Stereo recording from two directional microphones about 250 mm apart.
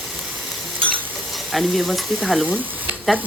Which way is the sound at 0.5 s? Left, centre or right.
Centre.